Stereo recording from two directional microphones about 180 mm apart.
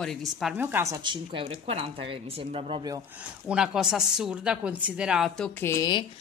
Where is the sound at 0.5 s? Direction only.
10° right (ahead or behind); by 3.0 s 25° right (ahead or behind).